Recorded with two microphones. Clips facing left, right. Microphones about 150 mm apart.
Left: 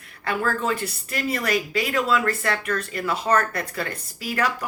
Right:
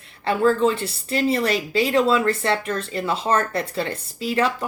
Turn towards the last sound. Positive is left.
turn(degrees=-25)  # may be behind; listen again after turning